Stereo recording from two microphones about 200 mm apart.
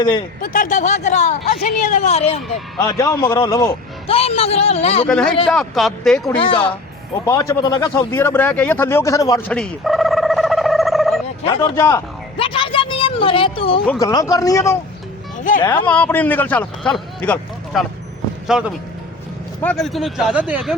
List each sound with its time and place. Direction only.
0.4 s a woman's voice: 40° left (ahead or behind)
2.7 s speech: 20° left (ahead or behind)
4.0 s a man's voice: 30° left (ahead or behind)
5.0 s speech: 5° left (ahead or behind)
6.2 s a man's voice: 25° left (ahead or behind)
7.3 s speech: 15° left (ahead or behind)
9.5 s a sound: centre (ahead or behind)
11.4 s speech: 25° left (ahead or behind)
12.4 s a sound: 25° left (ahead or behind)
14.0 s speech: 20° left (ahead or behind); by 20.7 s centre (ahead or behind)